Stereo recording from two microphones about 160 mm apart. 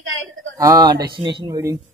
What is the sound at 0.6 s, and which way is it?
Speech, 25° right (ahead or behind).